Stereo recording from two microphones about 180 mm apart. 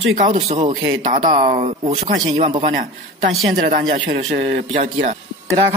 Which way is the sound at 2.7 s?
50° right (ahead or behind).